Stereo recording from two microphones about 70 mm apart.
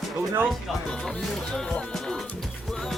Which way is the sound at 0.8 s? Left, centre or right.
Centre.